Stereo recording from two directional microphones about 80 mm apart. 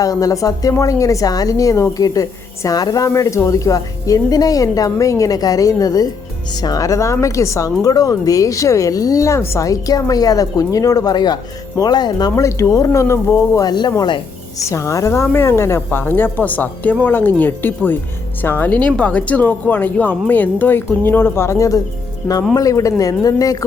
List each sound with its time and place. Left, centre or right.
0.0 s speech: left
3.1 s speech: left
12.4 s speech: left
13.7 s speech: left
14.6 s speech: left